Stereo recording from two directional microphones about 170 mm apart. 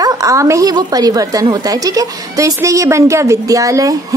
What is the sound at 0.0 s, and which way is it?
A woman's voice, 20° right (ahead or behind).